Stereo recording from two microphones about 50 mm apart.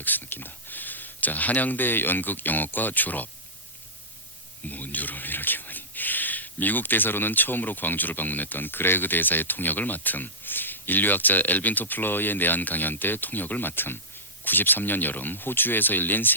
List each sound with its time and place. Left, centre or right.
0.0 s speech: left
4.7 s speech: left